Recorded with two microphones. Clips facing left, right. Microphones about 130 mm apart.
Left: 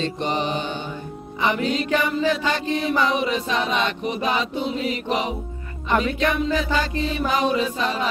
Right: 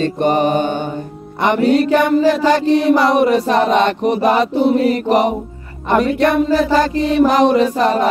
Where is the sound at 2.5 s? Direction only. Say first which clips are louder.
Right 10 dB; 75° right (ahead or behind).